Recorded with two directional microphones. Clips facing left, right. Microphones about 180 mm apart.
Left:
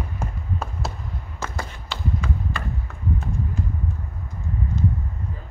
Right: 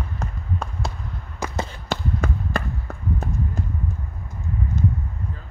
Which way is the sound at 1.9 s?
45° right (ahead or behind).